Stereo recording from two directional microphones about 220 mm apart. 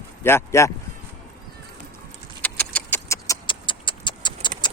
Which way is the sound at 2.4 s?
5° left (ahead or behind).